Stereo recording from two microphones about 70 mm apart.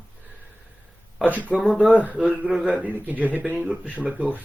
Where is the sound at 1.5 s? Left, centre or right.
Centre.